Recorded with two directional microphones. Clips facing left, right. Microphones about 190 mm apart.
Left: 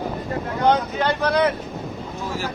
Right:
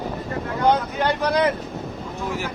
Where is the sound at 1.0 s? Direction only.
10° right (ahead or behind).